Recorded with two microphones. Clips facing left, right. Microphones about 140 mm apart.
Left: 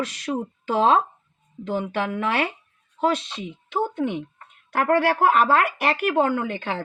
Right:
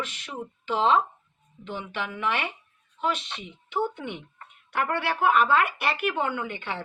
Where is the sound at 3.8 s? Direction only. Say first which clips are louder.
Left 5 dB; 40° left (ahead or behind).